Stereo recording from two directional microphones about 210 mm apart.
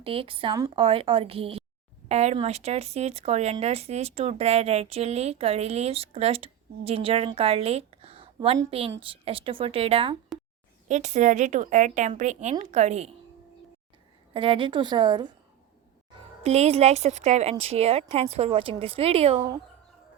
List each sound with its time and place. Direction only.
0.0 s speech: 25° right (ahead or behind)
14.3 s speech: 25° right (ahead or behind)
16.4 s speech: 30° right (ahead or behind)